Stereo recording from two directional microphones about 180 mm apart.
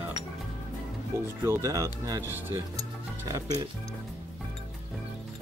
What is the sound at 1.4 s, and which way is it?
Speech, 15° right (ahead or behind).